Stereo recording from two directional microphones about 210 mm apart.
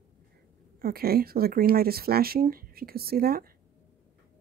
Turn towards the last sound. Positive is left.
turn(degrees=-45)  # may be behind; listen again after turning